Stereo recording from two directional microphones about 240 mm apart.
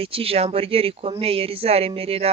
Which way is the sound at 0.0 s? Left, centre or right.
Right.